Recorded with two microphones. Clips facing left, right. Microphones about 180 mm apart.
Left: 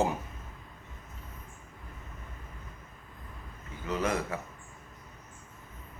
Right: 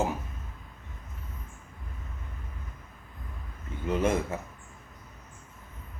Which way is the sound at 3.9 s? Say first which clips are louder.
Right 4 dB; 25° right (ahead or behind).